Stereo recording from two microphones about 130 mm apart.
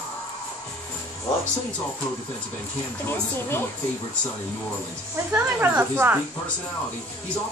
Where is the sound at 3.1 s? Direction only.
20° left (ahead or behind).